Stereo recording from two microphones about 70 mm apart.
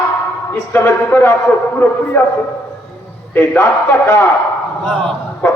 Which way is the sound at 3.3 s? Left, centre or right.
Left.